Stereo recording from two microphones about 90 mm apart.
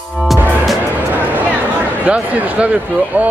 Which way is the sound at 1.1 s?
20° right (ahead or behind).